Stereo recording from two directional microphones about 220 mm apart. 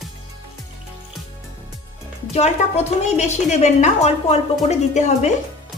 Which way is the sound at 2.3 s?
30° left (ahead or behind).